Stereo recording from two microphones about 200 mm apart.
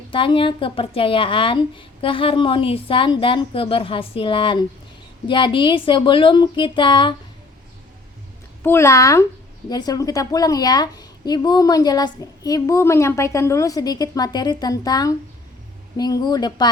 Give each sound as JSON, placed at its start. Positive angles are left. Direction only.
{"t": 0.1, "sound": "speech", "side_deg": 25}
{"t": 8.6, "sound": "a woman's voice", "side_deg": 15}